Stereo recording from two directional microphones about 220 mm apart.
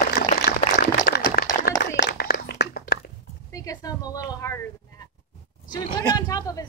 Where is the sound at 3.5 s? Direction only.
15° left (ahead or behind).